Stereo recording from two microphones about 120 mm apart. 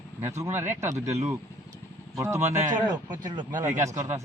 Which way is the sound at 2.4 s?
80° right.